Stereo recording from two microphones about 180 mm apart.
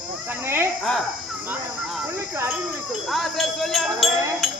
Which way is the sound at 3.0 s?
Centre (ahead or behind).